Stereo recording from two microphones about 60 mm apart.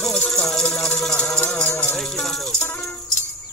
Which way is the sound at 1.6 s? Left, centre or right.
Left.